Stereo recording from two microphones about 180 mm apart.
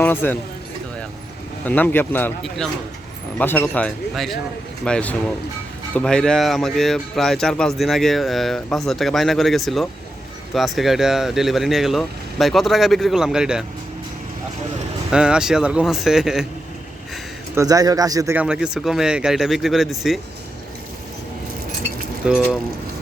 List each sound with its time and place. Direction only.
0.0 s speech: 10° left (ahead or behind)
1.6 s speech: 10° left (ahead or behind)
15.1 s speech: 5° right (ahead or behind)
17.5 s speech: 20° right (ahead or behind)
18.3 s speech: 5° right (ahead or behind)
22.2 s speech: 5° right (ahead or behind)